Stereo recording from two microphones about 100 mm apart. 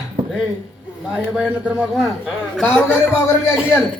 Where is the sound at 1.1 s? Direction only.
10° right (ahead or behind).